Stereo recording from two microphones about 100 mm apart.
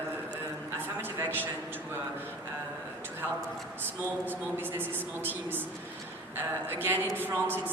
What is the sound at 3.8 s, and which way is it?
A woman's voice, 20° right (ahead or behind).